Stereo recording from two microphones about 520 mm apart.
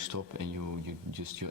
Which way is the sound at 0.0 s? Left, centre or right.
Right.